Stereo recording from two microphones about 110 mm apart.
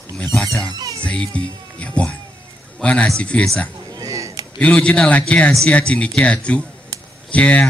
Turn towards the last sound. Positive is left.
turn(degrees=10)  # may be behind; listen again after turning